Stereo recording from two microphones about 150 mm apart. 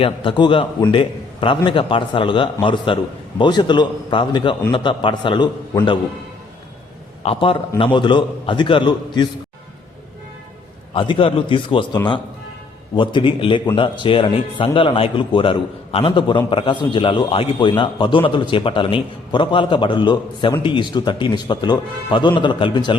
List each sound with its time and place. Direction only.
0.0 s a man's voice: 35° left (ahead or behind)
7.2 s a man's voice: 40° left (ahead or behind)
10.9 s a man's voice: 30° left (ahead or behind)
13.0 s a man's voice: 35° left (ahead or behind)